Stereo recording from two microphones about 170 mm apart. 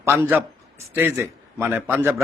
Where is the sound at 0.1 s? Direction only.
10° right (ahead or behind).